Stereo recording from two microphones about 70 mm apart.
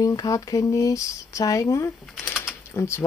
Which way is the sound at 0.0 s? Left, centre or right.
Left.